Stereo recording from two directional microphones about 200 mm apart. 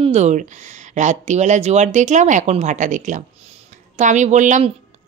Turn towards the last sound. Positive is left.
turn(degrees=-35)  # may be behind; listen again after turning